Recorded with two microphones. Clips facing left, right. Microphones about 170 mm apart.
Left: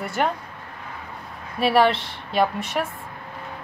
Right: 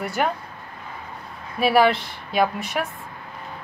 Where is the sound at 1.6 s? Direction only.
Centre (ahead or behind).